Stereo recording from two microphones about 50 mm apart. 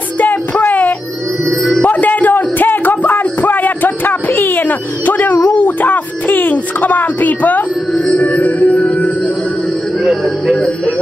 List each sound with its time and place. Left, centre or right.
0.2 s music: left
1.8 s a sound: left
8.1 s music: left
10.0 s music: centre